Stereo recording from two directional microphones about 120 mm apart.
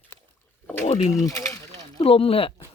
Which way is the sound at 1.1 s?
25° left (ahead or behind).